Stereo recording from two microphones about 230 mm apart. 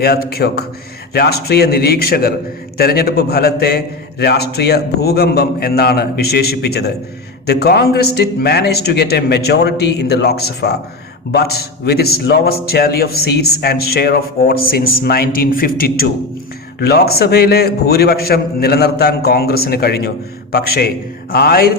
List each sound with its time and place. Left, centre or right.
0.0 s a man's voice: left